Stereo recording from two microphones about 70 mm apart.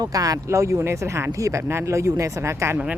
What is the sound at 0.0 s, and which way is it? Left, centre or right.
Speech, right.